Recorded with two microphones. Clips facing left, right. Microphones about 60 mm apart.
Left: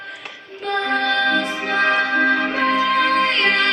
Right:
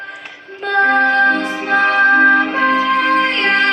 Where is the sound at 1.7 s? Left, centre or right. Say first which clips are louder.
Right 8 dB; right.